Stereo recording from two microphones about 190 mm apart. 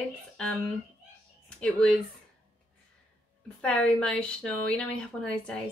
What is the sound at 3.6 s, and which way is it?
A woman's voice, 5° left (ahead or behind).